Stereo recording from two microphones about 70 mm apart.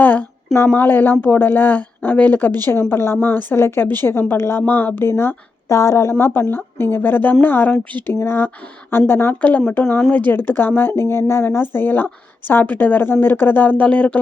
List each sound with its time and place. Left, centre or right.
0.0 s a sound: left
0.7 s speech: left
2.9 s speech: left
4.6 s speech: left